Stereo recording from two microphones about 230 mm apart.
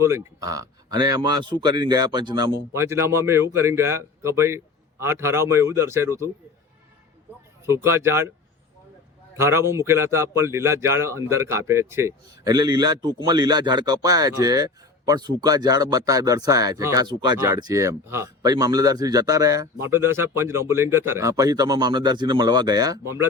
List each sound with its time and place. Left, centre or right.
0.0 s a man's voice: centre
7.9 s a man's voice: centre
9.3 s a man's voice: centre